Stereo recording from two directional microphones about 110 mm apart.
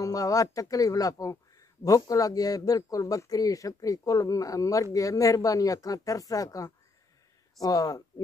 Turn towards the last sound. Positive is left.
turn(degrees=35)  # may be behind; listen again after turning